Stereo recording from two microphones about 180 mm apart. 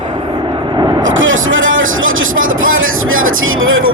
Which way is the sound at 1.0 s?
90° right.